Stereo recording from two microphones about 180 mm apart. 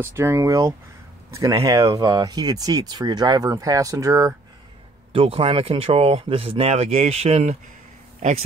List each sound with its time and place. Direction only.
0.0 s speech: 15° right (ahead or behind)
5.1 s speech: 30° right (ahead or behind)